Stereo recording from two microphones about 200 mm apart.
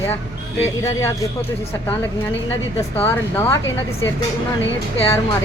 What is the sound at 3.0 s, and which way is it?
Speech, 15° left (ahead or behind).